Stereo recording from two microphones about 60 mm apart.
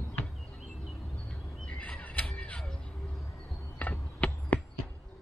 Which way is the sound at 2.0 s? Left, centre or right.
Centre.